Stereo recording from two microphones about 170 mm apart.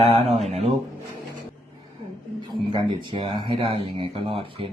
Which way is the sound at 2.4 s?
30° right (ahead or behind).